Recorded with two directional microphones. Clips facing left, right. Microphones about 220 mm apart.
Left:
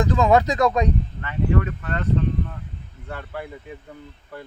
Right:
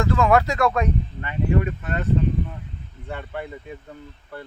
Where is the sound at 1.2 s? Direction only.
15° right (ahead or behind).